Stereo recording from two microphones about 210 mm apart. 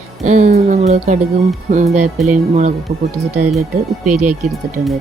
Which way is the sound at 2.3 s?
35° right (ahead or behind).